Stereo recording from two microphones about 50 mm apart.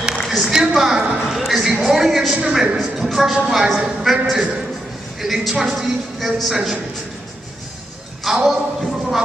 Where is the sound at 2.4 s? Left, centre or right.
Centre.